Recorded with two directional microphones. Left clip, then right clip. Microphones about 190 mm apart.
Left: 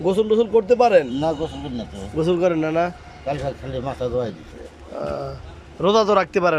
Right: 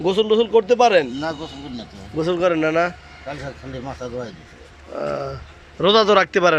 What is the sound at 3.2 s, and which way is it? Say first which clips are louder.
Speech: left 6 dB; 20° left (ahead or behind).